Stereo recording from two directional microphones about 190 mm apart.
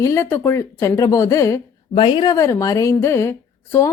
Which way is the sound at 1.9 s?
25° left (ahead or behind).